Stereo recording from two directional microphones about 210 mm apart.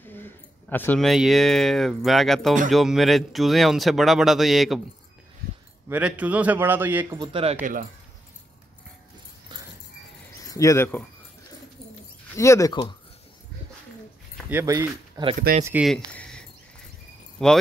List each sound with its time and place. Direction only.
0.0 s speech: 10° left (ahead or behind)
5.9 s a man's voice: 5° right (ahead or behind)
7.2 s speech: 25° right (ahead or behind)
7.6 s speech: 40° right (ahead or behind)
10.5 s speech: 15° left (ahead or behind)
12.4 s speech: 15° left (ahead or behind)
14.5 s a man's voice: 10° right (ahead or behind)
15.6 s speech: 5° right (ahead or behind)
16.1 s a sound: 5° left (ahead or behind)
17.4 s speech: centre (ahead or behind)